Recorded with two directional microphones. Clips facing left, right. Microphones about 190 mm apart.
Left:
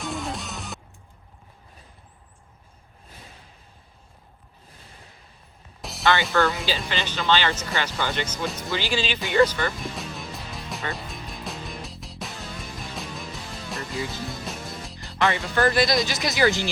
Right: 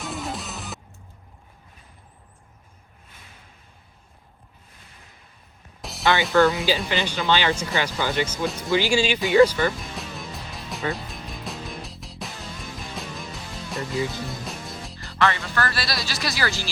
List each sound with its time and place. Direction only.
0.0 s music: centre (ahead or behind)
5.8 s music: centre (ahead or behind)
6.2 s speech: centre (ahead or behind)
6.7 s speech: 15° right (ahead or behind)
8.7 s speech: 10° right (ahead or behind)
9.9 s music: centre (ahead or behind)
15.2 s speech: 20° left (ahead or behind)